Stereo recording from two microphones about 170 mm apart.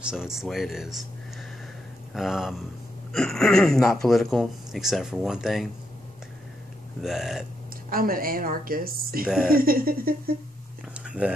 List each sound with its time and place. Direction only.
0.0 s speech: 5° right (ahead or behind)
2.1 s speech: centre (ahead or behind)
7.0 s speech: 5° right (ahead or behind)
7.9 s speech: 60° right (ahead or behind)
9.2 s speech: 5° right (ahead or behind)
9.5 s speech: 60° right (ahead or behind)
11.1 s speech: 5° right (ahead or behind)